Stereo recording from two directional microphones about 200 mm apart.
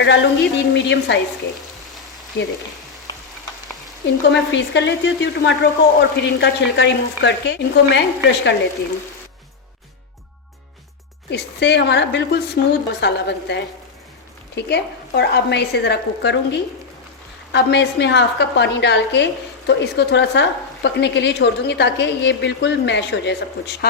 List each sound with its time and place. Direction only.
0.0 s a woman's voice: 60° left (ahead or behind)
4.0 s a woman's voice: 60° left (ahead or behind)
11.3 s a woman's voice: 60° left (ahead or behind)